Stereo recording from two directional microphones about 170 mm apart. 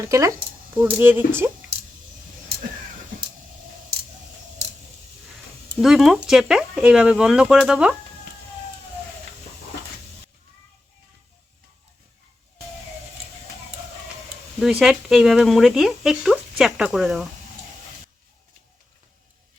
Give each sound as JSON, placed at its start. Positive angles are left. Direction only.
{"t": 0.0, "sound": "speech", "side_deg": -20}
{"t": 5.8, "sound": "speech", "side_deg": 0}
{"t": 14.6, "sound": "speech", "side_deg": -5}